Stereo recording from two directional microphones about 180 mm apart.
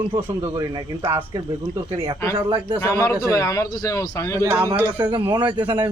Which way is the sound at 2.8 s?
15° left (ahead or behind).